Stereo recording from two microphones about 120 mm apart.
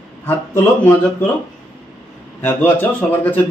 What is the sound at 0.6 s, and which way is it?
Speech, 15° left (ahead or behind).